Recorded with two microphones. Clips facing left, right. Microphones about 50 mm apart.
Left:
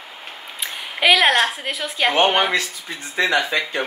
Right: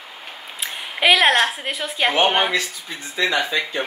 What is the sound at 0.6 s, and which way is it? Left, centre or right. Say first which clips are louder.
A woman's voice: even; centre.